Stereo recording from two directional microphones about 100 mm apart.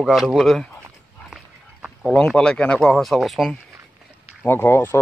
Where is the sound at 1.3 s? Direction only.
5° right (ahead or behind).